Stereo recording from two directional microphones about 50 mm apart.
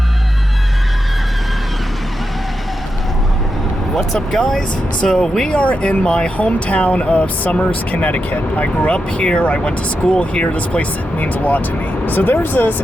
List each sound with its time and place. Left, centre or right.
3.9 s speech: centre
5.5 s speech: left